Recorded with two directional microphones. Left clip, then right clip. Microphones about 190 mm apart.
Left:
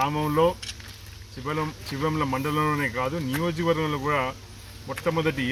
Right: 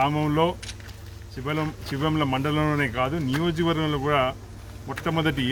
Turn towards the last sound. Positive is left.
turn(degrees=-20)  # may be behind; listen again after turning